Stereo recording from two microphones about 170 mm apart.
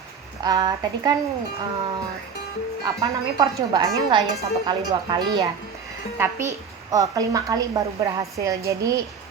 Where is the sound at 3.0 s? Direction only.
20° right (ahead or behind).